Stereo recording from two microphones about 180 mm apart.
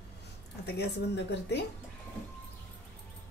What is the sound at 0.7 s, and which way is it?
Speech, 70° left (ahead or behind).